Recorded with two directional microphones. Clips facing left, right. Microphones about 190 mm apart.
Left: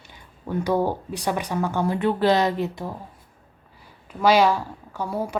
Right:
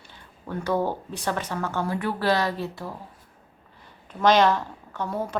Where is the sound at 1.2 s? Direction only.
15° left (ahead or behind).